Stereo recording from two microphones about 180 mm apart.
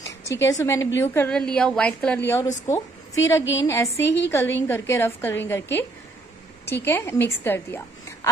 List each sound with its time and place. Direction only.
0.2 s a woman's voice: 15° left (ahead or behind)